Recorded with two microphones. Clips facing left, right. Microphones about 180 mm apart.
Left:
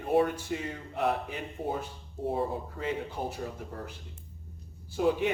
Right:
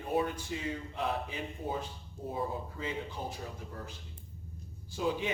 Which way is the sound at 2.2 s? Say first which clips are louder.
Left 5 dB; 60° left (ahead or behind).